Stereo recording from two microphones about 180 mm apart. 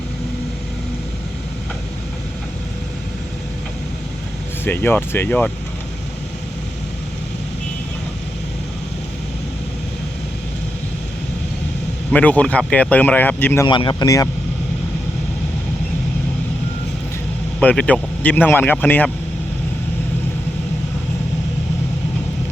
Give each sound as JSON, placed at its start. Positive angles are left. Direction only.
{"t": 4.6, "sound": "speech", "side_deg": 10}
{"t": 12.1, "sound": "speech", "side_deg": 5}
{"t": 13.7, "sound": "speech", "side_deg": 25}
{"t": 17.6, "sound": "speech", "side_deg": 5}